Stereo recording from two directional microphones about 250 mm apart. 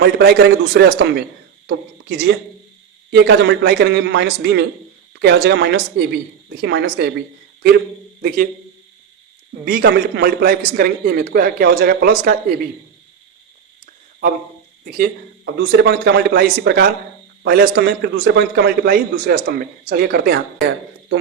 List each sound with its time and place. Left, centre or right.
0.0 s a man's voice: right
9.6 s a man's voice: right
13.8 s a sound: right
14.8 s a man's voice: right